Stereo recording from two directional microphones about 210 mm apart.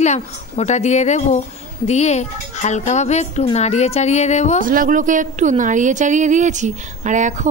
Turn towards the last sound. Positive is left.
turn(degrees=-35)  # may be behind; listen again after turning